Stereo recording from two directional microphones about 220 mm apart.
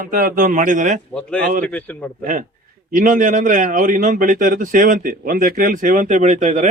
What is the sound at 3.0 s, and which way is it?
Speech, 35° right (ahead or behind).